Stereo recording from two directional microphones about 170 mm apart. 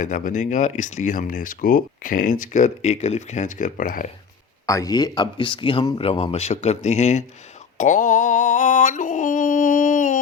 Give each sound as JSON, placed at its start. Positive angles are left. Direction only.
{"t": 0.0, "sound": "speech", "side_deg": 50}
{"t": 4.6, "sound": "speech", "side_deg": 20}
{"t": 7.8, "sound": "yodeling", "side_deg": 50}